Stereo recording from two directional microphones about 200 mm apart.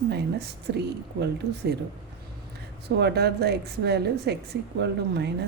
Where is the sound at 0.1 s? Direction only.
55° right (ahead or behind).